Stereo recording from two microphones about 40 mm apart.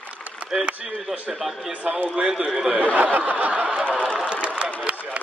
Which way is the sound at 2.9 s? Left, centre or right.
Right.